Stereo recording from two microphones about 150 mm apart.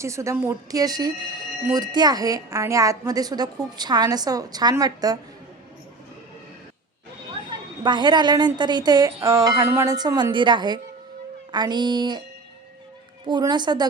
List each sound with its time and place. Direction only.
0.0 s a woman's voice: 20° right (ahead or behind)
7.9 s a woman's voice: 30° right (ahead or behind)
13.2 s a woman's voice: 30° right (ahead or behind)